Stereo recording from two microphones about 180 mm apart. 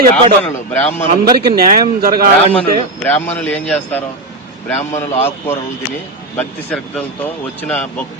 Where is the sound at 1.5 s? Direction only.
55° right (ahead or behind).